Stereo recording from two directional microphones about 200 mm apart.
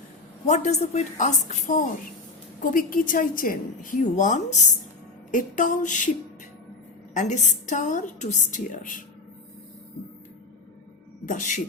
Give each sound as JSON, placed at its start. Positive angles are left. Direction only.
{"t": 0.4, "sound": "a woman's voice", "side_deg": 35}
{"t": 7.1, "sound": "a woman's voice", "side_deg": 35}
{"t": 11.3, "sound": "a woman's voice", "side_deg": 40}